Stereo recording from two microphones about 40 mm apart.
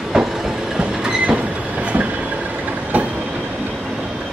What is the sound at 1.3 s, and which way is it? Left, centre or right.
Train, right.